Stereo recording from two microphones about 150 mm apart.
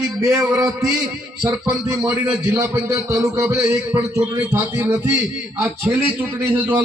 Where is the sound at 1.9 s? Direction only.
15° right (ahead or behind).